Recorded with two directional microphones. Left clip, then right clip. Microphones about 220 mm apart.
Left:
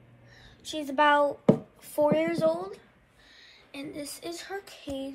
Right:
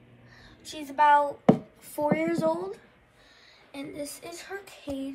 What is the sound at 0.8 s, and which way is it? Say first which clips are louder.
A woman's voice: right 2 dB; 5° left (ahead or behind).